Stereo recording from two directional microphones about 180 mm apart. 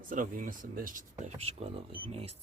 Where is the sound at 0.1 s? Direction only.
50° right (ahead or behind).